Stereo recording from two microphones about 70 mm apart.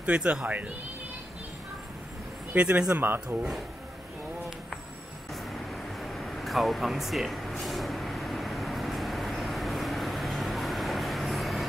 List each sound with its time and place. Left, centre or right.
0.0 s speech: centre
2.5 s a man's voice: centre
2.9 s a man's voice: right
6.1 s a sound: centre